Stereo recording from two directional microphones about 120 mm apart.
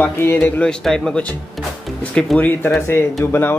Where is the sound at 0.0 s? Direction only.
15° left (ahead or behind).